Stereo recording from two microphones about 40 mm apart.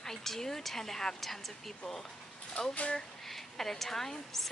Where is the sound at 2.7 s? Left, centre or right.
Left.